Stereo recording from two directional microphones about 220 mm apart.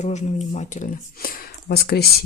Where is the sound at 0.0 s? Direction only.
30° left (ahead or behind).